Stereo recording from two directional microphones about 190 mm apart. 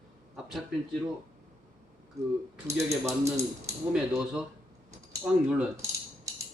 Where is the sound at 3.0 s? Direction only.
15° right (ahead or behind).